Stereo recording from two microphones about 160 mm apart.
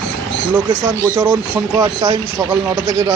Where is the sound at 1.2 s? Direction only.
10° right (ahead or behind).